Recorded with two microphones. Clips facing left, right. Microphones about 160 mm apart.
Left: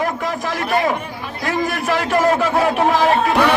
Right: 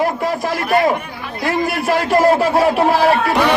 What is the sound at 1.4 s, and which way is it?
A man's voice, 10° right (ahead or behind).